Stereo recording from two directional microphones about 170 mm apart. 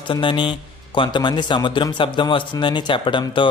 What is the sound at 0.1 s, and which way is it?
A man's voice, 30° left (ahead or behind).